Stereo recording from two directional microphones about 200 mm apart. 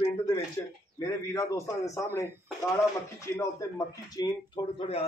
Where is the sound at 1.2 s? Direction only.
15° left (ahead or behind).